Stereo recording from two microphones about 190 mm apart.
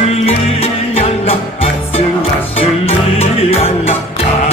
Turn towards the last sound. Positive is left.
turn(degrees=35)  # may be behind; listen again after turning